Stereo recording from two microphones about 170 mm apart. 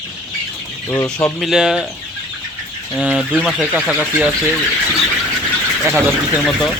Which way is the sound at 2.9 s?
Centre (ahead or behind).